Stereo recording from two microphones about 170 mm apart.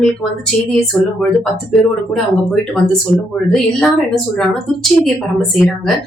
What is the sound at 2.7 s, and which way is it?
Speech, 5° left (ahead or behind).